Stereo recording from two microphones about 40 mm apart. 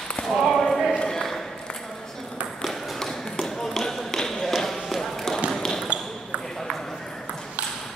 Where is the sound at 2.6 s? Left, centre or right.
Centre.